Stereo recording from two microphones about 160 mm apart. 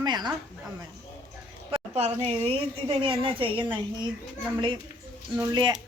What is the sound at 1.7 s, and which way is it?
A woman's voice, 40° right (ahead or behind).